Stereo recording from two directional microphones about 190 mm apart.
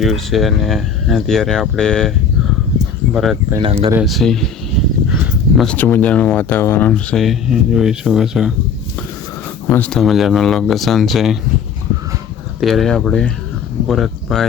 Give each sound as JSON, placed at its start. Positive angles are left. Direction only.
{"t": 0.0, "sound": "speech", "side_deg": 0}
{"t": 3.6, "sound": "speech", "side_deg": -30}
{"t": 4.0, "sound": "speech", "side_deg": 0}
{"t": 5.0, "sound": "a sound", "side_deg": -5}
{"t": 5.6, "sound": "speech", "side_deg": 10}
{"t": 9.6, "sound": "speech", "side_deg": 10}
{"t": 12.5, "sound": "speech", "side_deg": 0}